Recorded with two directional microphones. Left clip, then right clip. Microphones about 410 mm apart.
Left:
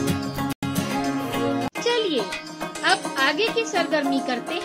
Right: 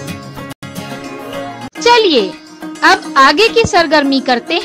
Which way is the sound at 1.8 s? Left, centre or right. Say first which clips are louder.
Right 16 dB; right.